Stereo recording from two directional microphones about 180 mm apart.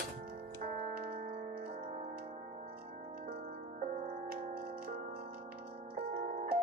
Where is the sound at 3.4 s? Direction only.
45° right (ahead or behind).